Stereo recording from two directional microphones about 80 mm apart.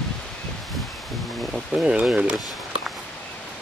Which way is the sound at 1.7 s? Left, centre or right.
Centre.